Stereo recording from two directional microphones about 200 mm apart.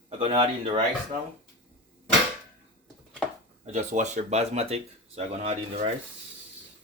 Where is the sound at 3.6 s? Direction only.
35° right (ahead or behind).